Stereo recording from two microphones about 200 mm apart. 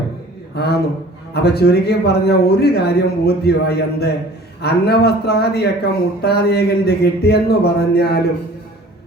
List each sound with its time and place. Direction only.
0.5 s a man's voice: 55° left (ahead or behind)